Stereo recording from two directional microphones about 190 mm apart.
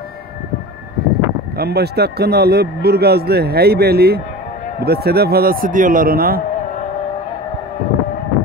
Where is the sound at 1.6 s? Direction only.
55° right (ahead or behind).